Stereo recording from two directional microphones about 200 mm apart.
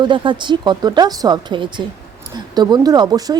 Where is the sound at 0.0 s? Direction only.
25° right (ahead or behind).